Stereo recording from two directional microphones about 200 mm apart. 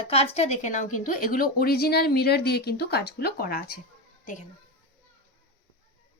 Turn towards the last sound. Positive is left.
turn(degrees=40)  # may be behind; listen again after turning